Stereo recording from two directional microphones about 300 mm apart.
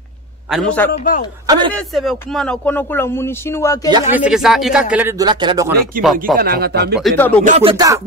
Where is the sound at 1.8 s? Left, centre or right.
Centre.